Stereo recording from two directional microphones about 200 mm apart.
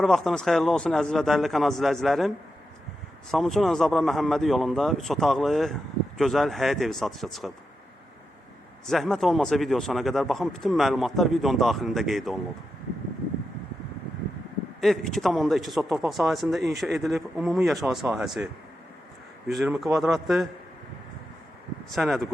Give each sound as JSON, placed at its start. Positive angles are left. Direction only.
{"t": 0.0, "sound": "a man's voice", "side_deg": 0}
{"t": 3.3, "sound": "a man's voice", "side_deg": 0}
{"t": 8.9, "sound": "a man's voice", "side_deg": 0}
{"t": 14.8, "sound": "a man's voice", "side_deg": 0}
{"t": 16.6, "sound": "speech", "side_deg": -55}
{"t": 16.8, "sound": "a man's voice", "side_deg": 0}
{"t": 19.5, "sound": "a man's voice", "side_deg": 0}
{"t": 21.9, "sound": "a man's voice", "side_deg": 0}